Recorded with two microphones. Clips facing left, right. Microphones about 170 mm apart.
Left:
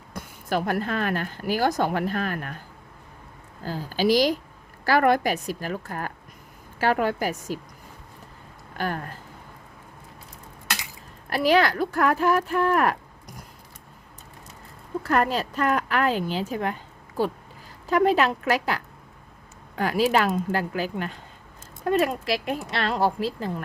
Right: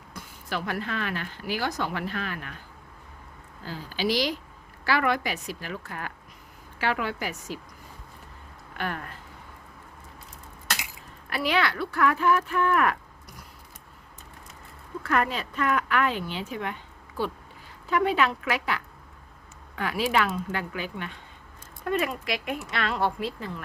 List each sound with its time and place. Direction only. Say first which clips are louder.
0.1 s a woman's voice: left 7 dB; 45° left (ahead or behind)
3.6 s a woman's voice: left 5 dB; 45° left (ahead or behind)
8.7 s speech: left 4 dB; 40° left (ahead or behind)
11.3 s speech: left 6 dB; 40° left (ahead or behind)
15.0 s speech: left 3 dB; 35° left (ahead or behind)
17.8 s speech: left 4 dB; 40° left (ahead or behind)